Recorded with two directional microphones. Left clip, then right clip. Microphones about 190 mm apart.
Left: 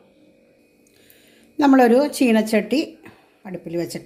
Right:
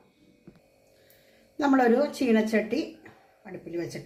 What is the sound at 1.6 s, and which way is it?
Speech, 45° left (ahead or behind).